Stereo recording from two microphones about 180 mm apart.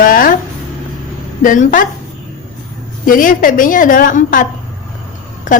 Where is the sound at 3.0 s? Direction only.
50° left (ahead or behind).